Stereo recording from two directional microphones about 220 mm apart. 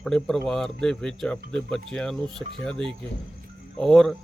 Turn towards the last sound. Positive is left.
turn(degrees=0)  # may be behind; listen again after turning